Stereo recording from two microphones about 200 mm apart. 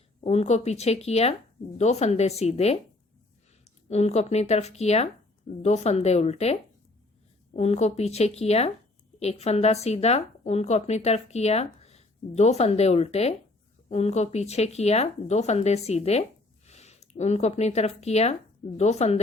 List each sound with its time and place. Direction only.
0.3 s speech: 35° left (ahead or behind)